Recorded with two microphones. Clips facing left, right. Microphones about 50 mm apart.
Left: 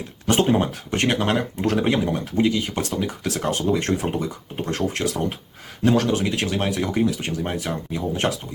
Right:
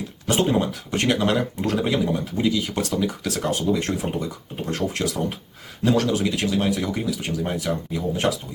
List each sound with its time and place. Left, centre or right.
0.6 s speech: left
7.4 s speech: left